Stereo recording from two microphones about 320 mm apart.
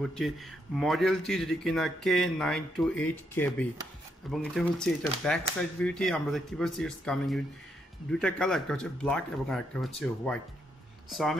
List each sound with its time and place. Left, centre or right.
0.0 s speech: centre